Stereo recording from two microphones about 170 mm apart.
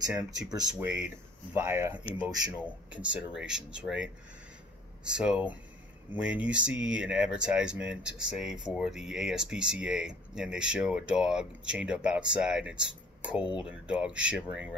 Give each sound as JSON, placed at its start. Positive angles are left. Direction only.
{"t": 0.5, "sound": "speech", "side_deg": -20}